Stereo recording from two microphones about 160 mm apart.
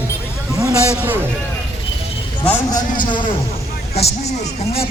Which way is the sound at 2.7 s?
25° left (ahead or behind).